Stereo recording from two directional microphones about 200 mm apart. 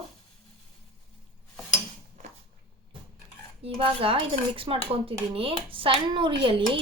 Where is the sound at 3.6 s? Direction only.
30° right (ahead or behind).